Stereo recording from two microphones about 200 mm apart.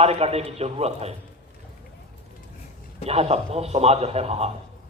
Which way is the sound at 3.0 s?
30° right (ahead or behind).